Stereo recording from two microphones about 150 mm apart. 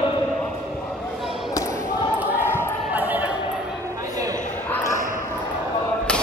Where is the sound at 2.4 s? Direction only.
15° left (ahead or behind).